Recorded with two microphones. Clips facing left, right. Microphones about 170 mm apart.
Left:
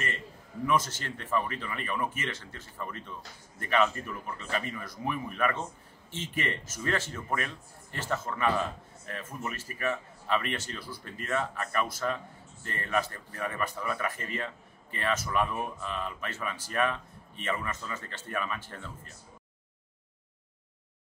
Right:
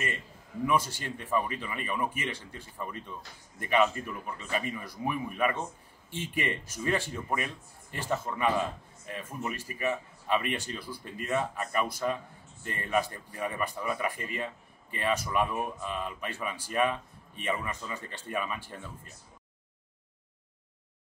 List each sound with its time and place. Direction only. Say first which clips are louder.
0.7 s speech: even; 10° right (ahead or behind)